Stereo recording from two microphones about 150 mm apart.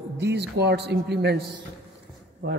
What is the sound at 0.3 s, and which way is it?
Speech, 90° right.